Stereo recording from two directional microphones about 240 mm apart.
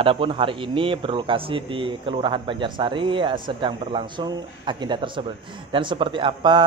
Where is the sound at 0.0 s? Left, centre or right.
Right.